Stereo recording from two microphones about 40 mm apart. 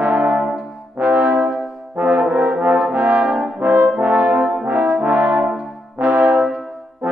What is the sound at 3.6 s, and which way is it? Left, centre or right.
Brass instrument, right.